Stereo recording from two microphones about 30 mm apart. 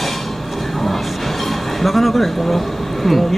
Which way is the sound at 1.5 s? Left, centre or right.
Centre.